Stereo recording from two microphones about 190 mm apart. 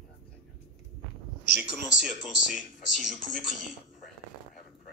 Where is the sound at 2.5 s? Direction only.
45° left (ahead or behind).